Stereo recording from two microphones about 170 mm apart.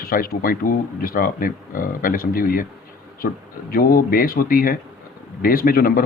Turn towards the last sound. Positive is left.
turn(degrees=60)  # may be behind; listen again after turning